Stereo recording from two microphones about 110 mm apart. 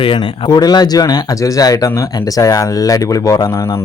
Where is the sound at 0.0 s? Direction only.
50° left (ahead or behind); by 3.8 s 30° left (ahead or behind).